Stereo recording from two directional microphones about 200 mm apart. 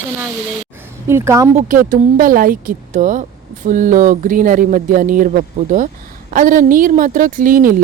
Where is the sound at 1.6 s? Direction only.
40° right (ahead or behind).